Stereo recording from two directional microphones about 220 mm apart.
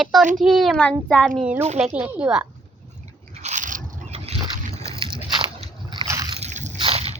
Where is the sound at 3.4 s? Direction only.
35° right (ahead or behind).